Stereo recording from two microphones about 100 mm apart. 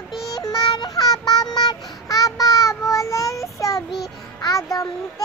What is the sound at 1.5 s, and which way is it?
Child singing, 40° left (ahead or behind).